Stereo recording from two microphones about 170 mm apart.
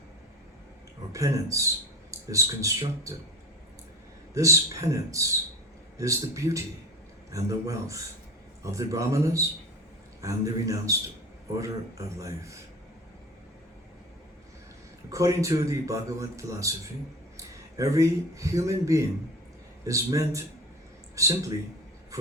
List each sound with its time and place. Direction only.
1.1 s speech: 20° right (ahead or behind)
4.4 s a man's voice: 20° right (ahead or behind)
15.1 s a man's voice: 20° right (ahead or behind)
22.1 s a sound: 20° right (ahead or behind)